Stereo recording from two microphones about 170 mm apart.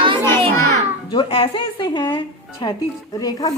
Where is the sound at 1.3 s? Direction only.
30° left (ahead or behind).